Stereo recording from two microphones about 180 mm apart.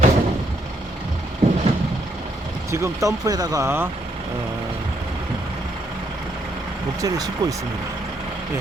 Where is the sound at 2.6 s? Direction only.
15° right (ahead or behind).